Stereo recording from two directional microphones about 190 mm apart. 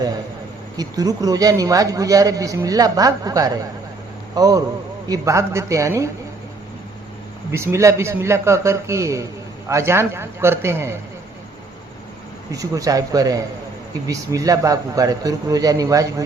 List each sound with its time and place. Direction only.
0.8 s a man's voice: 20° right (ahead or behind)
7.5 s a man's voice: 15° right (ahead or behind)
12.5 s a man's voice: 15° right (ahead or behind)